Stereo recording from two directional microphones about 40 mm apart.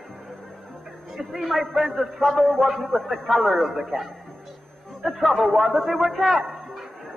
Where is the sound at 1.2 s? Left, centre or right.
Centre.